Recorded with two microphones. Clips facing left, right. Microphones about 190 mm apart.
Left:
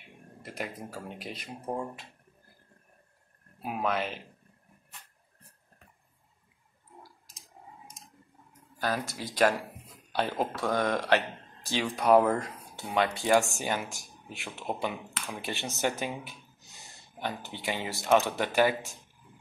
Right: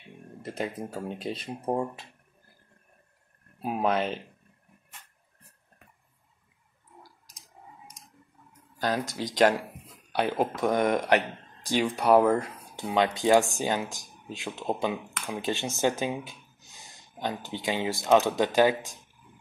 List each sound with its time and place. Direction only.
0.4 s speech: 25° right (ahead or behind)
3.6 s speech: 30° right (ahead or behind)
8.7 s speech: 20° right (ahead or behind)
12.9 s speech: 20° right (ahead or behind)